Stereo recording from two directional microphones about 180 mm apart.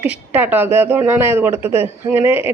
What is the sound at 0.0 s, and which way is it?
Speech, 10° right (ahead or behind).